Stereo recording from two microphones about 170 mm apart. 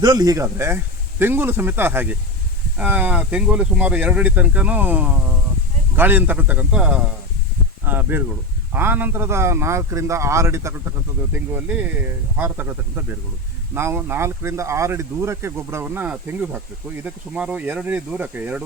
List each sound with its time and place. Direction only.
0.0 s speech: 20° right (ahead or behind)